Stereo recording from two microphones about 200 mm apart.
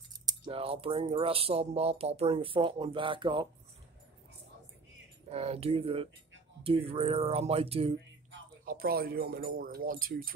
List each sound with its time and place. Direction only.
0.2 s speech: 25° right (ahead or behind)
5.3 s speech: 30° right (ahead or behind)
8.6 s speech: 50° right (ahead or behind)